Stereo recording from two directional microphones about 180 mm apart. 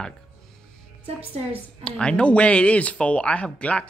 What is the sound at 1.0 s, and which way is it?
Speech, 30° right (ahead or behind).